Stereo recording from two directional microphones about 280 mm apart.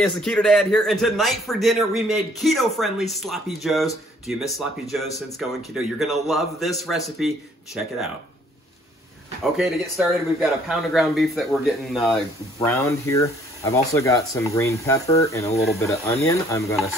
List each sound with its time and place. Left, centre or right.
0.1 s a man's voice: centre
9.4 s a man's voice: centre